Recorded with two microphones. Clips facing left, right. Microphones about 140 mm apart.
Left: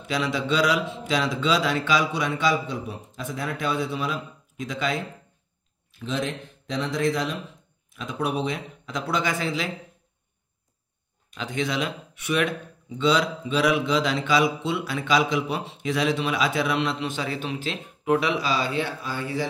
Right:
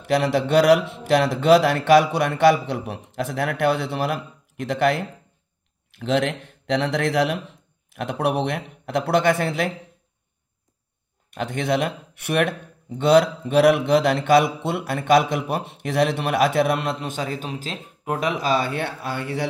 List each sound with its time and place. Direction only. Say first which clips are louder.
0.0 s a man's voice: right 6 dB; 60° right (ahead or behind)
11.2 s speech: right 4 dB; 55° right (ahead or behind)